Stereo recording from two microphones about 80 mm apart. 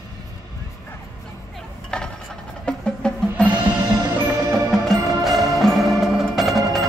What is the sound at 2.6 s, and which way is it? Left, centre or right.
Music, centre.